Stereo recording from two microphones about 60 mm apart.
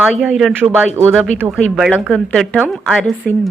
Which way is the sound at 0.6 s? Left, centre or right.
Right.